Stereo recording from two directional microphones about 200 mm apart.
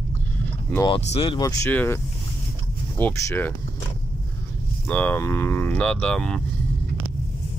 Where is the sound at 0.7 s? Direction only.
20° left (ahead or behind).